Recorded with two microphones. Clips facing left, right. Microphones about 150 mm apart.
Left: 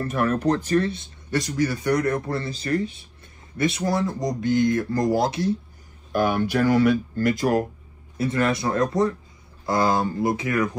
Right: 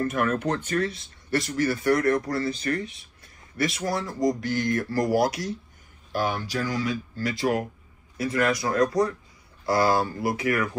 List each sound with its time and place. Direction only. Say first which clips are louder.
0.0 s speech: left 2 dB; 35° left (ahead or behind)
1.3 s speech: left 1 dB; 15° left (ahead or behind)
6.1 s speech: left 6 dB; 55° left (ahead or behind)
8.2 s speech: left 2 dB; 25° left (ahead or behind)